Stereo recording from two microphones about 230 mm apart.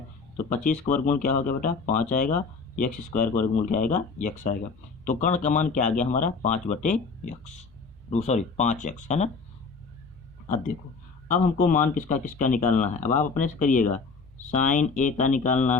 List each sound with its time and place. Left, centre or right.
1.0 s speech: left
8.1 s speech: left
11.3 s speech: left